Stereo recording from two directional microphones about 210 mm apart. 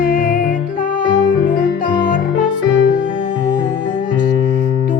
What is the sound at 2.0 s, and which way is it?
Music, 40° left (ahead or behind).